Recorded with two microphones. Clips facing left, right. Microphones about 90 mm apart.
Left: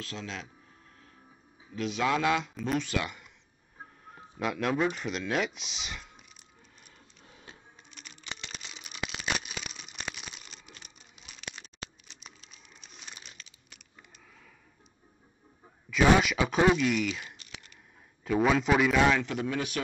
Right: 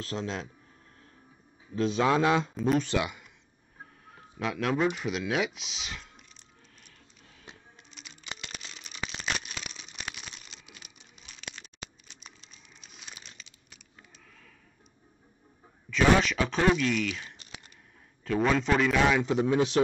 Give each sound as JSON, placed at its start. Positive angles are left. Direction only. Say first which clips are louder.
{"t": 0.0, "sound": "a man's voice", "louder": "right 5 dB", "side_deg": -35}
{"t": 1.8, "sound": "a man's voice", "louder": "right 4 dB", "side_deg": -30}
{"t": 3.0, "sound": "speech", "louder": "right 4 dB", "side_deg": -5}
{"t": 4.4, "sound": "speech", "louder": "right 1 dB", "side_deg": 0}
{"t": 7.9, "sound": "a sound", "louder": "even", "side_deg": -5}
{"t": 12.1, "sound": "crumpling", "louder": "even", "side_deg": 0}
{"t": 15.9, "sound": "speech", "louder": "even", "side_deg": 10}
{"t": 19.2, "sound": "a man's voice", "louder": "right 7 dB", "side_deg": -25}